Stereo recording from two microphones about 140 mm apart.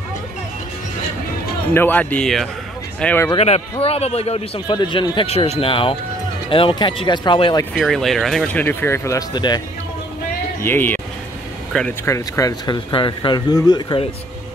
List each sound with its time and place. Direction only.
1.7 s speech: 15° left (ahead or behind)
3.3 s a man's voice: 45° left (ahead or behind)
4.6 s speech: 35° left (ahead or behind)
7.7 s speech: centre (ahead or behind)
8.6 s speech: 15° left (ahead or behind)
9.3 s speech: 30° left (ahead or behind)
10.6 s speech: 15° left (ahead or behind)
12.0 s speech: 20° left (ahead or behind)
12.9 s speech: 35° left (ahead or behind)